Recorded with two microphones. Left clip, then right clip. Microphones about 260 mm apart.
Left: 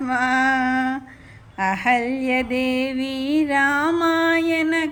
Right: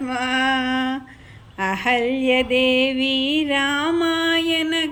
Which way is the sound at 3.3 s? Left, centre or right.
Left.